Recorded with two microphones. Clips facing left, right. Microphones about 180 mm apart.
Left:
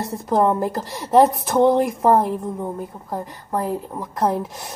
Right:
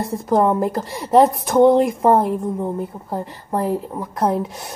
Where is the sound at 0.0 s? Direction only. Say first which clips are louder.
Right 2 dB; centre (ahead or behind).